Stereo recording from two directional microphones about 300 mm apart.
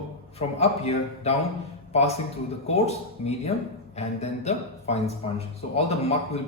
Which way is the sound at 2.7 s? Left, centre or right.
Left.